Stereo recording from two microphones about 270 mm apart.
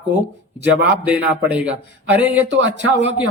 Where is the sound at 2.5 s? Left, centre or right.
Right.